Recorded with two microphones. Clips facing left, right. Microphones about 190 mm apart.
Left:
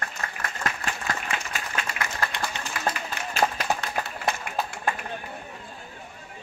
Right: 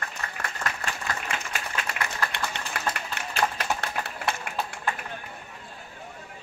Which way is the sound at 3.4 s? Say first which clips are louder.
Left 3 dB; 40° left (ahead or behind).